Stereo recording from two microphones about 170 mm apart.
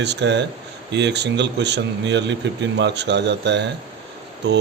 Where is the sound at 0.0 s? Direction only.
90° right.